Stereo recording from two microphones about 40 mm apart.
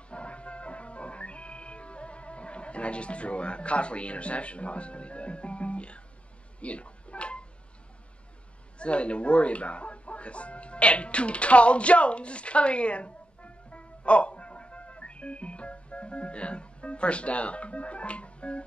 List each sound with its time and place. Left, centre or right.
0.1 s music: left
6.6 s a sound: left
8.7 s speech: left